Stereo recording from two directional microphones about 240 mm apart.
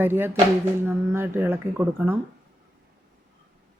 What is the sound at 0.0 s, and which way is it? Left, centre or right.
Speech, centre.